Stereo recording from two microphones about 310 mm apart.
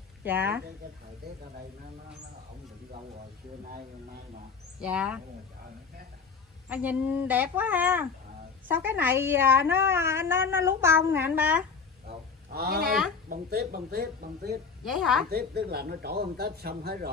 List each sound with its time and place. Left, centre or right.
0.2 s a woman's voice: centre
4.7 s speech: centre
6.7 s a woman's voice: centre
12.5 s speech: right
14.9 s speech: centre
15.2 s speech: right